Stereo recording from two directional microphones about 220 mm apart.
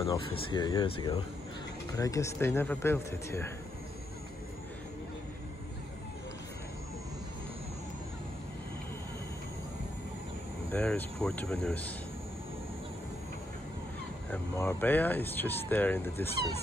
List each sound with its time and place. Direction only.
0.0 s speech: 20° left (ahead or behind)
10.7 s speech: 5° left (ahead or behind)
14.3 s speech: 10° left (ahead or behind)